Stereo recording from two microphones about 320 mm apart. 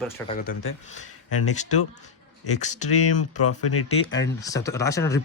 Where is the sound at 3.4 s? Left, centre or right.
Left.